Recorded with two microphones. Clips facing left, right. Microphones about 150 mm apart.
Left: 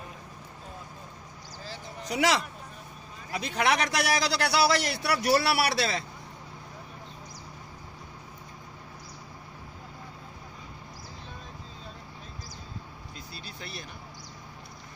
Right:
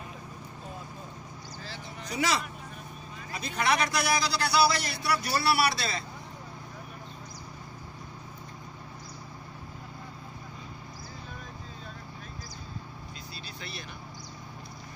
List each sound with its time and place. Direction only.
2.0 s a man's voice: 90° left
13.6 s vehicle: 45° left (ahead or behind)